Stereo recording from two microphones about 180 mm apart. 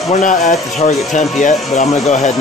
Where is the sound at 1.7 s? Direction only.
40° left (ahead or behind).